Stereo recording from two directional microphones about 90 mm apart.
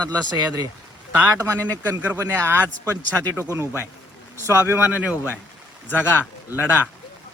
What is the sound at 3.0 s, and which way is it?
Speech, 25° left (ahead or behind).